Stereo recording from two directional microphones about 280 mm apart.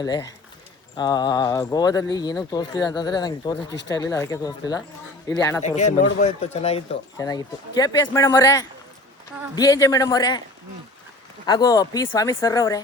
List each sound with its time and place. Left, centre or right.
0.0 s speech: centre
5.6 s speech: left
11.4 s speech: centre